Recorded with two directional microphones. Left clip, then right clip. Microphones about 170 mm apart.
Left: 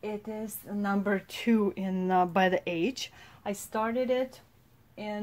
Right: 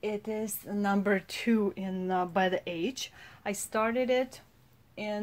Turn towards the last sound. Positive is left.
turn(degrees=-45)  # may be behind; listen again after turning